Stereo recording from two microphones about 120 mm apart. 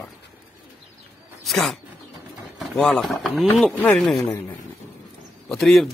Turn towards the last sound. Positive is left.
turn(degrees=0)  # may be behind; listen again after turning